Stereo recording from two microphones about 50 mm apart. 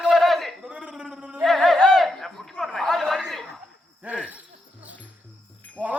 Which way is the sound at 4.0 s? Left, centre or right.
Right.